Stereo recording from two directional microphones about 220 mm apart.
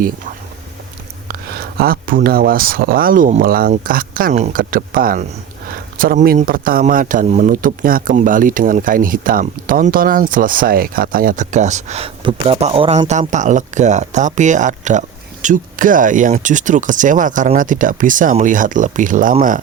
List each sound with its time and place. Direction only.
1.3 s a man's voice: 45° right (ahead or behind)